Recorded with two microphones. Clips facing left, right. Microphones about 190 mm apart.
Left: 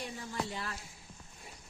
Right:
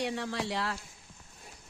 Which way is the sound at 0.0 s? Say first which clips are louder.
Right 6 dB; 80° right.